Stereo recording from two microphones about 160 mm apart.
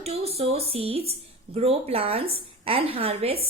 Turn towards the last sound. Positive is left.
turn(degrees=-35)  # may be behind; listen again after turning